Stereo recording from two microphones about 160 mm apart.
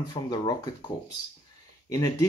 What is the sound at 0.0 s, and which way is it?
Speech, 25° left (ahead or behind).